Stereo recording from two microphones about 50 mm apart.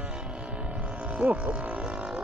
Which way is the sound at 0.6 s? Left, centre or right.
Right.